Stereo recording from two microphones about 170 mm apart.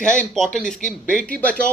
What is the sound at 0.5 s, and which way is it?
A man's voice, 5° left (ahead or behind).